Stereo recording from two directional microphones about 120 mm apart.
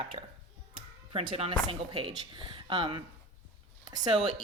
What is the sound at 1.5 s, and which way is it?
Speech, 45° right (ahead or behind).